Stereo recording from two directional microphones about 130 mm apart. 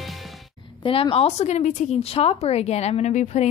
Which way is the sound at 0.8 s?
45° left (ahead or behind).